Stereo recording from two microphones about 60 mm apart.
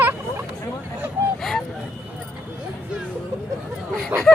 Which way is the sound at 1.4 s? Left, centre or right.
Centre.